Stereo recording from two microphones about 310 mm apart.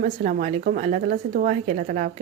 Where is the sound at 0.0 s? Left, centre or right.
Right.